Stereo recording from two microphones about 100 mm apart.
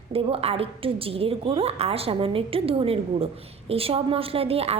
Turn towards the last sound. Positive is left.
turn(degrees=-85)